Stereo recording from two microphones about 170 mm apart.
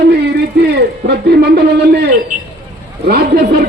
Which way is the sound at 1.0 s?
70° right (ahead or behind).